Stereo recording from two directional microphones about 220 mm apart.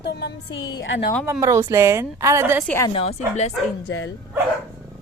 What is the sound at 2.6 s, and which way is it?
Speech, 10° left (ahead or behind).